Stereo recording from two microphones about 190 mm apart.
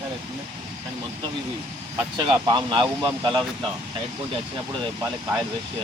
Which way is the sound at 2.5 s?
25° right (ahead or behind).